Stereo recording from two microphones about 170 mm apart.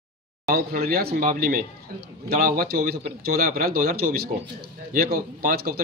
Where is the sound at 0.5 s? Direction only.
65° right (ahead or behind).